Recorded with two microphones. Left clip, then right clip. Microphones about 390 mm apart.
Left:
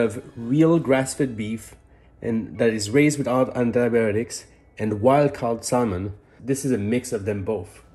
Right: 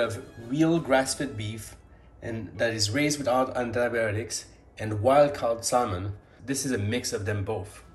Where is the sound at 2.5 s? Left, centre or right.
Centre.